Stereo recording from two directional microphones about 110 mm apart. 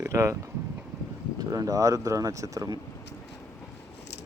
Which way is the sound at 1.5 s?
30° right (ahead or behind).